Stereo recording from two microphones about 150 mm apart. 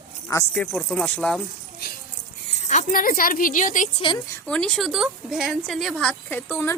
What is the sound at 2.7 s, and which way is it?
A woman's voice, 55° left (ahead or behind).